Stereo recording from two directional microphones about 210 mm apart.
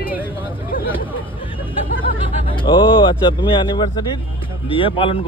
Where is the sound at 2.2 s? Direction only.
25° left (ahead or behind).